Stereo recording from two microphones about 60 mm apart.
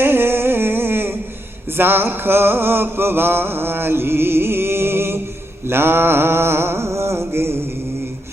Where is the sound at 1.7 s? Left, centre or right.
Right.